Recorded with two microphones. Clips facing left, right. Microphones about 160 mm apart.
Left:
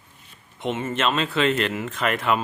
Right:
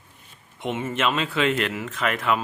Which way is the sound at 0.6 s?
10° right (ahead or behind).